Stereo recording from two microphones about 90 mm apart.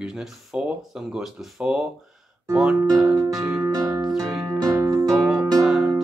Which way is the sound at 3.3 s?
5° right (ahead or behind).